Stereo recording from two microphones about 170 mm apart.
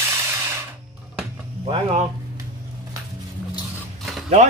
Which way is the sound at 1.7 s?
35° right (ahead or behind).